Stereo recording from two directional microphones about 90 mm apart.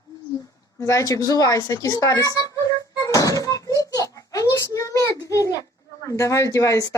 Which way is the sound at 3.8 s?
40° left (ahead or behind).